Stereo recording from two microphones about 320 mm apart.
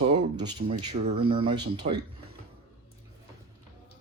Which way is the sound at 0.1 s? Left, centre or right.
Centre.